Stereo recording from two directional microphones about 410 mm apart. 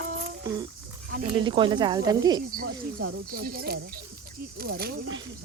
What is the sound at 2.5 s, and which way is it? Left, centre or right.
Speech, right.